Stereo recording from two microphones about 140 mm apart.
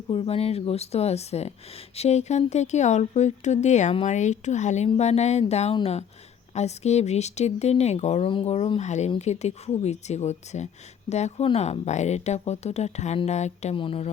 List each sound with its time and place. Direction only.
0.1 s speech: 45° left (ahead or behind)
13.7 s speech: 40° left (ahead or behind)